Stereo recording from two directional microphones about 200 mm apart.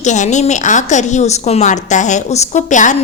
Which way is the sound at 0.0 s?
35° left (ahead or behind).